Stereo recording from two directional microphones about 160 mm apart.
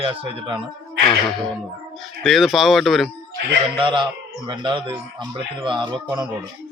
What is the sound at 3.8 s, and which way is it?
Speech, 30° right (ahead or behind).